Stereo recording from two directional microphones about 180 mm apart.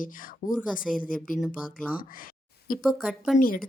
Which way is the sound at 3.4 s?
50° left (ahead or behind).